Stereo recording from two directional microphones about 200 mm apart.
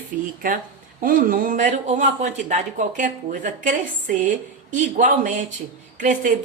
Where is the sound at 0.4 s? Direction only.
45° right (ahead or behind).